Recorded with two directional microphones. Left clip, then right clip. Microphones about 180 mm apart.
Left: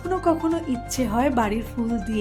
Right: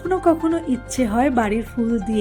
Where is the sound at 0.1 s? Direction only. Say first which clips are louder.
Right 4 dB; 15° right (ahead or behind).